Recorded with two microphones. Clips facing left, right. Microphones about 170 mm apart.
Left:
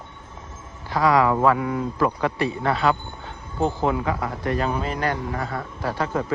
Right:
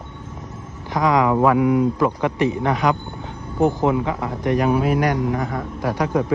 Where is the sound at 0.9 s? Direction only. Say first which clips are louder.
Right 1 dB; 20° right (ahead or behind).